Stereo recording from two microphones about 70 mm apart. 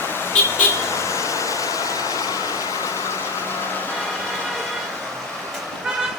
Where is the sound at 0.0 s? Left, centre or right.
Left.